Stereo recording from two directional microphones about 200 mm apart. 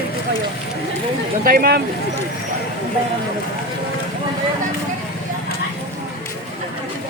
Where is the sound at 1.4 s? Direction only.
45° right (ahead or behind).